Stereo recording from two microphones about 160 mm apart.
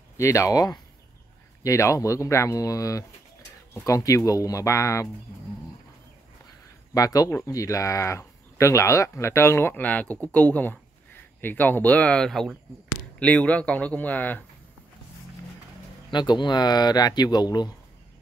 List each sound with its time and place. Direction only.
0.2 s speech: 20° left (ahead or behind)
6.9 s speech: 20° left (ahead or behind)
16.1 s speech: 30° left (ahead or behind)